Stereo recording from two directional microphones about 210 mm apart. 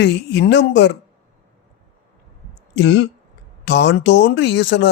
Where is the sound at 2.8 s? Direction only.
55° left (ahead or behind).